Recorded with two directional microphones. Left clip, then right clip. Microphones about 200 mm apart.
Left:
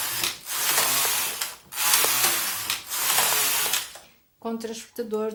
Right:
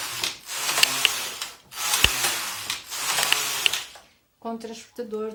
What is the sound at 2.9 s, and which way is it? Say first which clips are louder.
Ratchet: right 1 dB; centre (ahead or behind).